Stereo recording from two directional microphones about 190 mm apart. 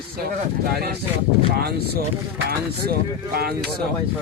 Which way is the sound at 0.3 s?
55° right (ahead or behind).